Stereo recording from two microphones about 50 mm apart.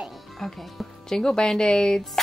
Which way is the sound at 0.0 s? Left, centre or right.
Centre.